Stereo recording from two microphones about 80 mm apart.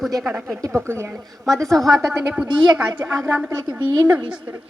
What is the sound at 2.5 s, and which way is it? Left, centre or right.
Speech, right.